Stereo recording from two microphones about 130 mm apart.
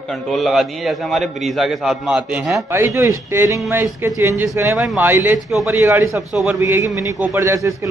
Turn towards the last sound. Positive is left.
turn(degrees=-25)  # may be behind; listen again after turning